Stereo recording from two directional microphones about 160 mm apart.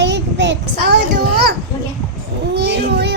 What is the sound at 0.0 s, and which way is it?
Child singing, 90° right.